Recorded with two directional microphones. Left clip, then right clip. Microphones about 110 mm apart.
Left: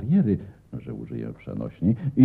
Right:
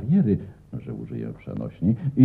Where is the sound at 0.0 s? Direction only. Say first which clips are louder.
Right 1 dB; 25° right (ahead or behind).